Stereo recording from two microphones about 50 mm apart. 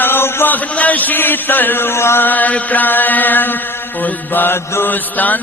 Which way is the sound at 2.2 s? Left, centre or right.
Left.